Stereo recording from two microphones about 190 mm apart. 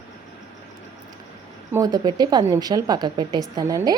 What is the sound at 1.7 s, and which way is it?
A woman's voice, 20° right (ahead or behind).